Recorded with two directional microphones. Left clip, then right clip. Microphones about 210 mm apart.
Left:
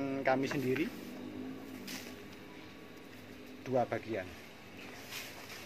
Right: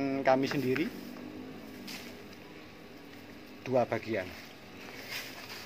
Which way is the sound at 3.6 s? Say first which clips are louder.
Right 4 dB; 30° right (ahead or behind).